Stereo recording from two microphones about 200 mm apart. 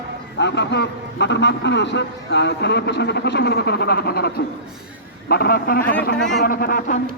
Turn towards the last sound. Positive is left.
turn(degrees=45)  # may be behind; listen again after turning